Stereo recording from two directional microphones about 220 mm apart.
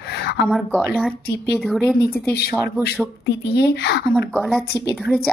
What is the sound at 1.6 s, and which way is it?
Speech, centre (ahead or behind).